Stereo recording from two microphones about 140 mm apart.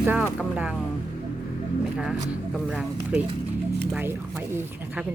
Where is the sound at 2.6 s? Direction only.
10° right (ahead or behind).